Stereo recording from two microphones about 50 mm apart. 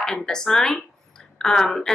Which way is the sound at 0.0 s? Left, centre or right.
Centre.